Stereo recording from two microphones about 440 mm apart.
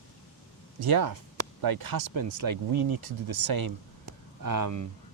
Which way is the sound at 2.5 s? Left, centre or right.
Right.